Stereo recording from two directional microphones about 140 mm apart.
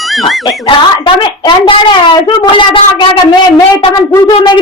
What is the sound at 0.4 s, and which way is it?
A woman's voice, 35° left (ahead or behind).